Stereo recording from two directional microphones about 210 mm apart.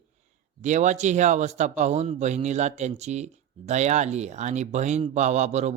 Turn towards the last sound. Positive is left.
turn(degrees=-30)  # may be behind; listen again after turning